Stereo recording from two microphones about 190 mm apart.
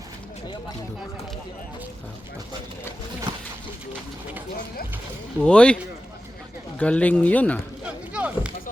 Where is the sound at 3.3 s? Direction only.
25° right (ahead or behind).